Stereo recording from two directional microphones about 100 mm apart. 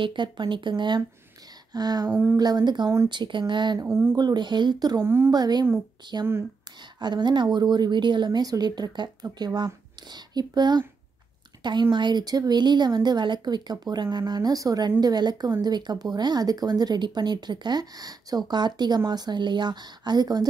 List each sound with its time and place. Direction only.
0.0 s speech: 50° right (ahead or behind)
3.8 s speech: 25° right (ahead or behind)
4.2 s speech: 45° right (ahead or behind)
5.0 s speech: 25° right (ahead or behind)
5.3 s speech: 45° right (ahead or behind)